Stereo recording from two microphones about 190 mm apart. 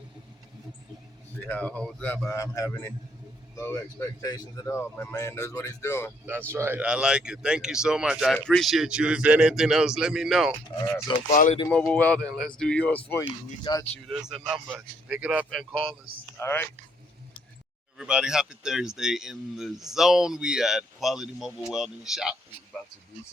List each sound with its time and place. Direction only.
1.4 s speech: 10° left (ahead or behind)
6.2 s speech: 10° right (ahead or behind)
11.3 s speech: 40° left (ahead or behind)
11.7 s speech: 5° left (ahead or behind)
13.7 s speech: 25° left (ahead or behind)
14.1 s speech: centre (ahead or behind)
16.4 s speech: 10° left (ahead or behind)
17.9 s speech: 5° right (ahead or behind)